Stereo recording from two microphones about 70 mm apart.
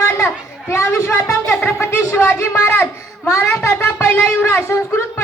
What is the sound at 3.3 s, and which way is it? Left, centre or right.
Child singing, left.